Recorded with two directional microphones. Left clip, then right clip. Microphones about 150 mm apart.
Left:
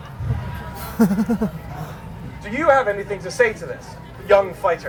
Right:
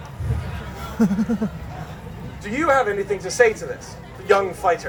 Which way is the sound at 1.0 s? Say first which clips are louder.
Left 3 dB; 50° left (ahead or behind).